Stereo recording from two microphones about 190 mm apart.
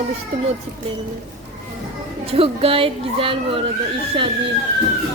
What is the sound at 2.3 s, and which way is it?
Speech, 30° right (ahead or behind).